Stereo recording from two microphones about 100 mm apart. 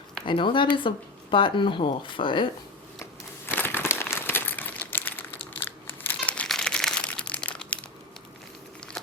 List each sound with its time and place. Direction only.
0.3 s speech: 55° left (ahead or behind)
3.0 s crumpling: 20° left (ahead or behind)